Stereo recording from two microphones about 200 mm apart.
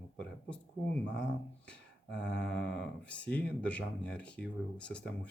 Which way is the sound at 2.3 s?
60° left (ahead or behind).